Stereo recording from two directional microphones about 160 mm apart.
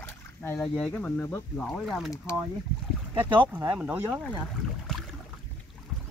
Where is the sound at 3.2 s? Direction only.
30° right (ahead or behind).